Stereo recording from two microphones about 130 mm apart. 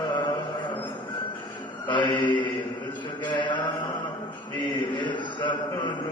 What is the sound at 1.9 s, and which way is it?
Mantra, 35° left (ahead or behind).